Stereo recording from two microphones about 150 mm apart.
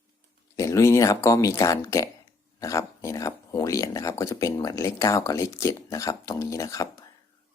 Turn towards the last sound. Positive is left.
turn(degrees=20)  # may be behind; listen again after turning